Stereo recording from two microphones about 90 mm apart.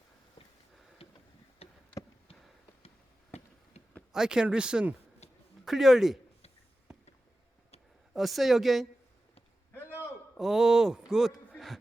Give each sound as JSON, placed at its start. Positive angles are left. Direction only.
{"t": 1.0, "sound": "tick-tock", "side_deg": 90}
{"t": 1.6, "sound": "a sound", "side_deg": 90}
{"t": 4.1, "sound": "a woman's voice", "side_deg": -5}
{"t": 8.1, "sound": "a woman's voice", "side_deg": 0}
{"t": 9.7, "sound": "a sound", "side_deg": 25}
{"t": 10.3, "sound": "speech", "side_deg": 0}